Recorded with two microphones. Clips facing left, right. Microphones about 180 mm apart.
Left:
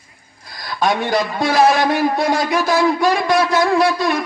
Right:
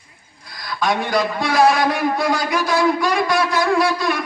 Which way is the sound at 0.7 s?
25° left (ahead or behind).